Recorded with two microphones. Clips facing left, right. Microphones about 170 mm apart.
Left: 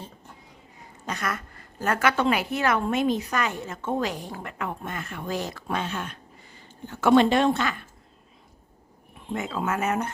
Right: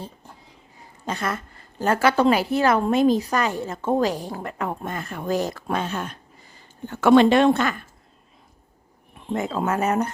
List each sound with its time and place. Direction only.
1.0 s a woman's voice: 30° right (ahead or behind)
6.8 s speech: 70° right (ahead or behind); by 7.8 s 50° right (ahead or behind)
9.3 s a woman's voice: 40° right (ahead or behind)